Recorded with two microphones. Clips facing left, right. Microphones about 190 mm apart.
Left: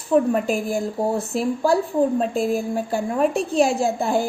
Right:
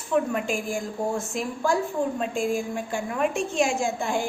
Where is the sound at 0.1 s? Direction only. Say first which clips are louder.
Left 6 dB; 40° left (ahead or behind).